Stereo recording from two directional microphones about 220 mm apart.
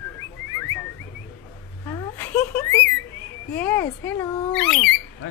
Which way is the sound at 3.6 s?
10° left (ahead or behind).